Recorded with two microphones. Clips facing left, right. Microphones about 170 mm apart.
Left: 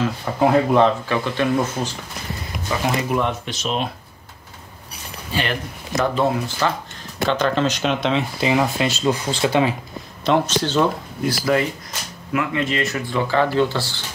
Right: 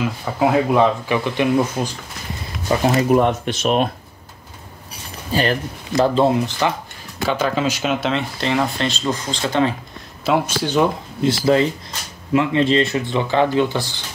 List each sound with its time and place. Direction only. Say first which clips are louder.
0.0 s speech: even; 5° right (ahead or behind)
3.1 s speech: right 6 dB; 45° right (ahead or behind)
5.3 s speech: right 5 dB; 40° right (ahead or behind)
7.2 s speech: even; 5° right (ahead or behind); by 9.8 s 10° left (ahead or behind)
10.2 s speech: even; 10° right (ahead or behind)
11.2 s speech: right 4 dB; 25° right (ahead or behind)